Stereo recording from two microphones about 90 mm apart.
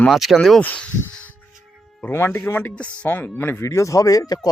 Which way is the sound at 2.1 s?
25° left (ahead or behind).